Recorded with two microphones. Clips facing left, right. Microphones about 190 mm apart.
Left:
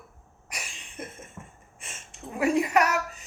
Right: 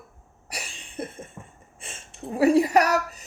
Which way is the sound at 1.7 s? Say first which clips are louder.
Right 5 dB; 30° right (ahead or behind).